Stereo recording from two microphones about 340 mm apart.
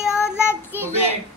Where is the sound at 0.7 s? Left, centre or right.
Centre.